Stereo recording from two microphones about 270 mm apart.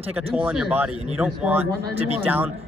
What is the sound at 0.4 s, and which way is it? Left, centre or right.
A man's voice, centre.